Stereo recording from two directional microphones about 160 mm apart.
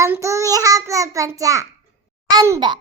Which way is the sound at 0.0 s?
20° right (ahead or behind).